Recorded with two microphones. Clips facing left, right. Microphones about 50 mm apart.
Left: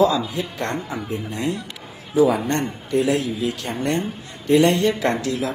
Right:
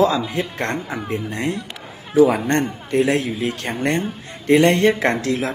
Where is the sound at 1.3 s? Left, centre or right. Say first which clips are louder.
Right 1 dB; right.